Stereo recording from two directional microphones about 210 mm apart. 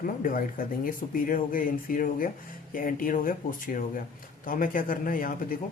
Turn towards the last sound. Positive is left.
turn(degrees=40)  # may be behind; listen again after turning